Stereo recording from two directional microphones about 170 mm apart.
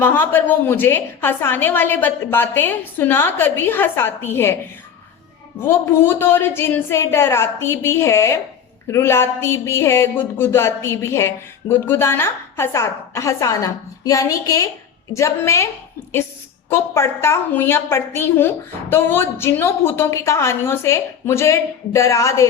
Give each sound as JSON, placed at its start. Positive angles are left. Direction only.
{"t": 0.0, "sound": "speech", "side_deg": 10}
{"t": 5.5, "sound": "speech", "side_deg": 15}